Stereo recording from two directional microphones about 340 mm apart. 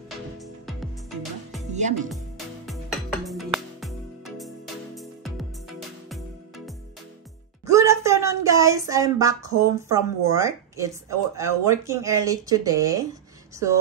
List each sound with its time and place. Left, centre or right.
1.7 s music: right
2.0 s music: centre
4.9 s music: centre
7.6 s speech: centre